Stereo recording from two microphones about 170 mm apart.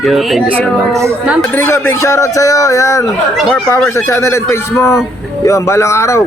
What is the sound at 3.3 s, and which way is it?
Speech, centre (ahead or behind).